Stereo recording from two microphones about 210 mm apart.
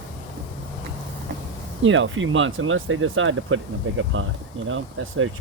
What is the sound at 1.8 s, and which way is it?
Speech, 65° right (ahead or behind).